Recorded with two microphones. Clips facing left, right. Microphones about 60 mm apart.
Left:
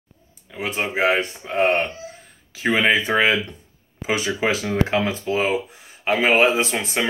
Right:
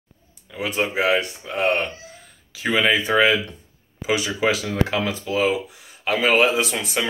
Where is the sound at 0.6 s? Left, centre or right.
Left.